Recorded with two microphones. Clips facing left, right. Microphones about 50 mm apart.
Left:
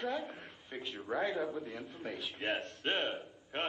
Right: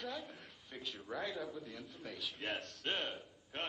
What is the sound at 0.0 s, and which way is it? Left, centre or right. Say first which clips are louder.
A man's voice: left 7 dB; left.